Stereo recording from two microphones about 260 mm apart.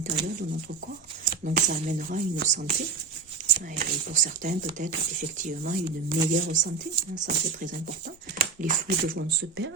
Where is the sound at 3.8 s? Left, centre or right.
Right.